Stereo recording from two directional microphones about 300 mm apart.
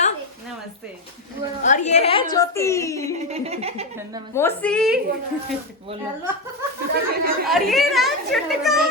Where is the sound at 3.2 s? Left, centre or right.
Right.